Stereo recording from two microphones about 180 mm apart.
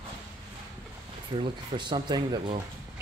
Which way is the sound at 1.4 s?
25° right (ahead or behind).